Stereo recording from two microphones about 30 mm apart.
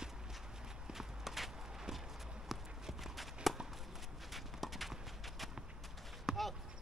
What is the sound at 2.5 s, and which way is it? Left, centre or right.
Walk, centre.